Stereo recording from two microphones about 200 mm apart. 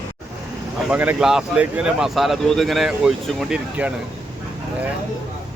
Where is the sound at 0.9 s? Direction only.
5° right (ahead or behind).